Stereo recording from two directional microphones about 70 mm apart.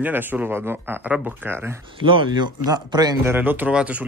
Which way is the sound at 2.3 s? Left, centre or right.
Right.